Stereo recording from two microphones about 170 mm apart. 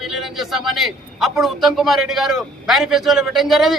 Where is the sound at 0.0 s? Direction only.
Centre (ahead or behind).